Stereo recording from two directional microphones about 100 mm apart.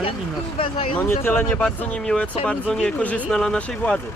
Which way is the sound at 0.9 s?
20° left (ahead or behind).